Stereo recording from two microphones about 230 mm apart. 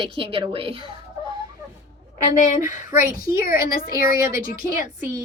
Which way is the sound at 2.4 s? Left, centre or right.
Left.